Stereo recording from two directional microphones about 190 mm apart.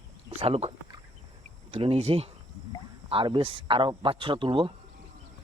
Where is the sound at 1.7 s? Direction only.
30° right (ahead or behind).